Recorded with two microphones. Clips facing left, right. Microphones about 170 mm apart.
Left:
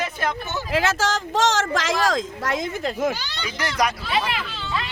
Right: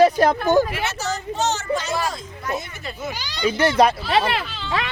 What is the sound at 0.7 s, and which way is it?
A woman's voice, 90° left.